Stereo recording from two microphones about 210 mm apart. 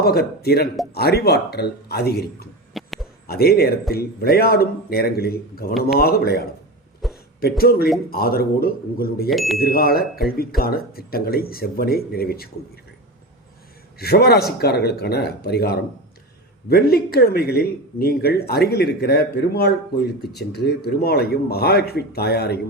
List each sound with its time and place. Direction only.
0.0 s speech: 45° left (ahead or behind)
2.7 s a sound: centre (ahead or behind)
3.2 s speech: 50° left (ahead or behind)
7.0 s a sound: centre (ahead or behind)
7.6 s speech: 45° left (ahead or behind)
9.3 s speech: centre (ahead or behind)
9.6 s speech: 45° left (ahead or behind)
14.0 s speech: 50° left (ahead or behind)